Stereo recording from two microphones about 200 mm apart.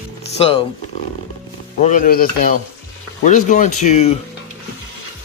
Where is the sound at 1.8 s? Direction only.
40° left (ahead or behind).